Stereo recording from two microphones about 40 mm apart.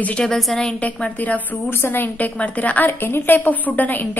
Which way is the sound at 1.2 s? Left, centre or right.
Left.